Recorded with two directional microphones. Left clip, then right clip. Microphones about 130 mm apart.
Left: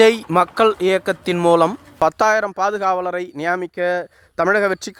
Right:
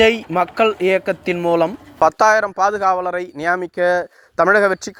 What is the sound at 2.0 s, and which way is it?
Speech, 55° left (ahead or behind).